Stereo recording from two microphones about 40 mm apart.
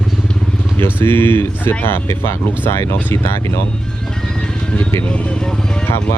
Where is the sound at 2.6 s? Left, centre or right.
Left.